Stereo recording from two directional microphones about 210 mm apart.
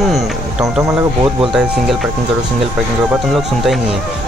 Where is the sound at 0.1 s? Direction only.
Centre (ahead or behind).